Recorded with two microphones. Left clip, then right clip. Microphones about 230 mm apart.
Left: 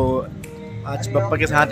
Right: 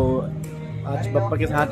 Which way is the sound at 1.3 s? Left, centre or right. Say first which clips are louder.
Left 9 dB; centre.